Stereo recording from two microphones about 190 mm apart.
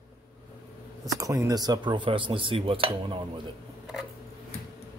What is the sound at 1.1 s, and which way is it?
Speech, 15° right (ahead or behind).